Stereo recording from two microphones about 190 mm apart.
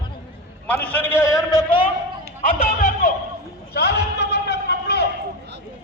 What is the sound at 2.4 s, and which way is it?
Speech, 45° left (ahead or behind).